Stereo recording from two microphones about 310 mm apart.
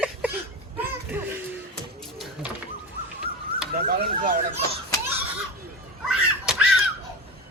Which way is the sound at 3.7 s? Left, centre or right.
Right.